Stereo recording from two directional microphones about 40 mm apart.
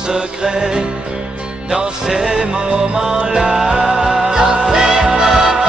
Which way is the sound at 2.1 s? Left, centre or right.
Centre.